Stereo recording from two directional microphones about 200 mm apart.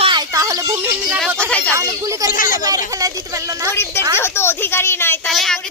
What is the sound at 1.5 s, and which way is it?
Speech, 5° left (ahead or behind).